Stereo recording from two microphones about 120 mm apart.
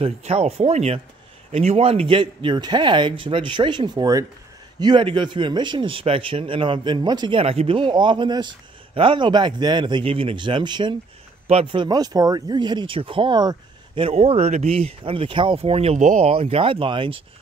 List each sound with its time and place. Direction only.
0.0 s speech: 60° right (ahead or behind); by 7.4 s 40° right (ahead or behind)
7.4 s speech: 55° right (ahead or behind)